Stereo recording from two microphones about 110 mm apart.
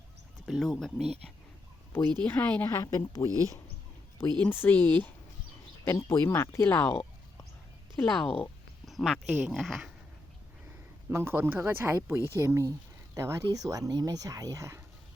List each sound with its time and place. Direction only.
0.4 s speech: centre (ahead or behind)
2.2 s speech: 15° left (ahead or behind)
2.6 s speech: 30° left (ahead or behind)
3.2 s speech: 30° right (ahead or behind)
4.4 s speech: 20° left (ahead or behind)
7.9 s speech: 5° left (ahead or behind)
11.1 s speech: 20° right (ahead or behind)